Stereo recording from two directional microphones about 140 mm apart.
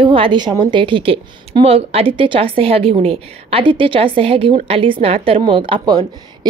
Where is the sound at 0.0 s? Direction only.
40° right (ahead or behind).